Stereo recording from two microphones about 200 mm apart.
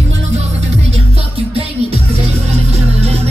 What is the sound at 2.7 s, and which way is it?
Music, 30° right (ahead or behind).